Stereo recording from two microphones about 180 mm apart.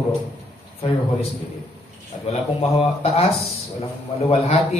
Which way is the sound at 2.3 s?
35° left (ahead or behind).